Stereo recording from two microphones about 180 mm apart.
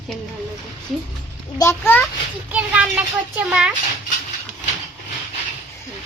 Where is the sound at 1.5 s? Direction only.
15° left (ahead or behind).